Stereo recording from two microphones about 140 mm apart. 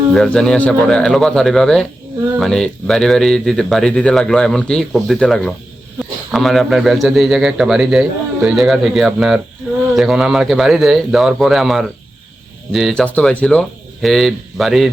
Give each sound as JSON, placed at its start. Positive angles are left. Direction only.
{"t": 0.1, "sound": "speech", "side_deg": 5}